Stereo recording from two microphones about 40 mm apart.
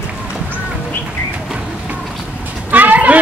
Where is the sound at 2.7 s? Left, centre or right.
Right.